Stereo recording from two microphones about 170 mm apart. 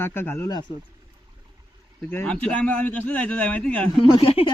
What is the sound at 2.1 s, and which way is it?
Speech, 10° left (ahead or behind).